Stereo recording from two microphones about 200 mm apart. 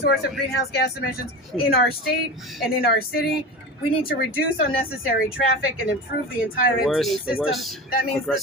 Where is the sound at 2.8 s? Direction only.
50° left (ahead or behind).